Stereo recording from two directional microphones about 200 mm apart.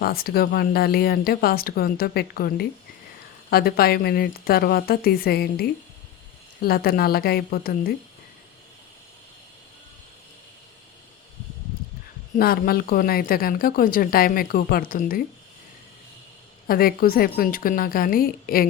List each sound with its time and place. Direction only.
0.0 s speech: 50° left (ahead or behind)
12.4 s speech: 50° left (ahead or behind)
16.6 s speech: 45° left (ahead or behind)